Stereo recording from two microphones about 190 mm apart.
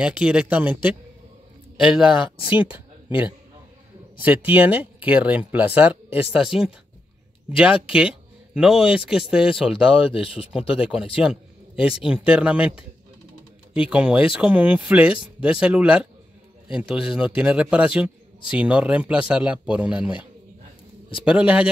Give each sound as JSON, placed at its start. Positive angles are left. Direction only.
{"t": 0.0, "sound": "speech", "side_deg": -5}
{"t": 4.2, "sound": "speech", "side_deg": -10}
{"t": 9.8, "sound": "speech", "side_deg": 30}
{"t": 10.7, "sound": "a man's voice", "side_deg": -5}
{"t": 21.2, "sound": "speech", "side_deg": -5}